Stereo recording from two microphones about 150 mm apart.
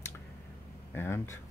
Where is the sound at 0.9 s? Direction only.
15° left (ahead or behind).